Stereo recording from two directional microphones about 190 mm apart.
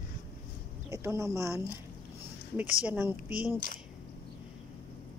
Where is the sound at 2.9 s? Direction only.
10° right (ahead or behind).